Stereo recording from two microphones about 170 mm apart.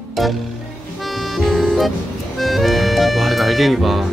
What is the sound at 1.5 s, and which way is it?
Music, centre (ahead or behind).